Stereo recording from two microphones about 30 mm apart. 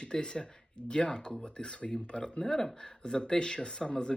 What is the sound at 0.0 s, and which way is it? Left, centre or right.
Speech, left.